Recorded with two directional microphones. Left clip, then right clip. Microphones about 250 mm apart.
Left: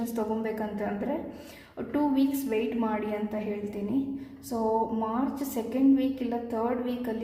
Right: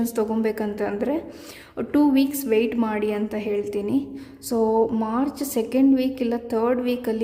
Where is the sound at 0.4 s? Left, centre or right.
Right.